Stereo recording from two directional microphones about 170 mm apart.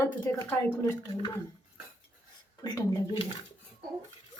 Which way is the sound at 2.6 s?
25° left (ahead or behind).